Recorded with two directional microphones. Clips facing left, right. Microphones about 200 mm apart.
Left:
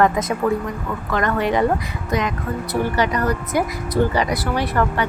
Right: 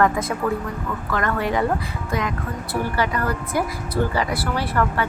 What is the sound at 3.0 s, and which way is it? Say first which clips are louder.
A woman's voice: left 3 dB; 20° left (ahead or behind).